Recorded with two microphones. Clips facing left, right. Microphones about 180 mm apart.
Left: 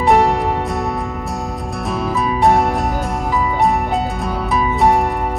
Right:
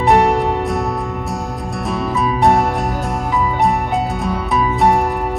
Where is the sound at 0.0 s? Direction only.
Centre (ahead or behind).